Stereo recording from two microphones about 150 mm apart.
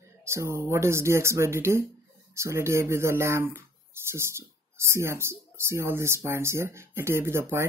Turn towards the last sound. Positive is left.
turn(degrees=-15)  # may be behind; listen again after turning